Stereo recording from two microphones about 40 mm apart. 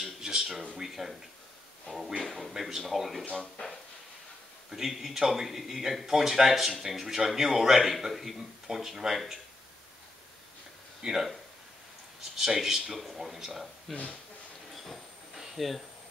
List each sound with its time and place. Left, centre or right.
0.0 s a sound: centre
2.2 s speech: centre
3.3 s speech: left
4.6 s a man's voice: centre
11.0 s speech: centre
12.4 s speech: centre
15.3 s a sound: centre